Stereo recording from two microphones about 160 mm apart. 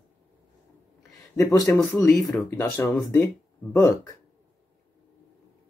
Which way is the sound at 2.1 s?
Centre (ahead or behind).